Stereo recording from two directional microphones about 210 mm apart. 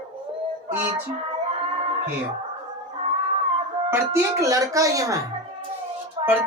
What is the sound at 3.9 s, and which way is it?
Speech, 15° right (ahead or behind).